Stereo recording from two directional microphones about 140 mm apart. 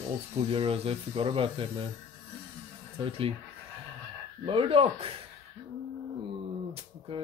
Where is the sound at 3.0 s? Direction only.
40° right (ahead or behind).